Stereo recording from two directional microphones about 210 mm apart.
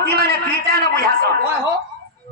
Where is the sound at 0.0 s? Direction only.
50° right (ahead or behind).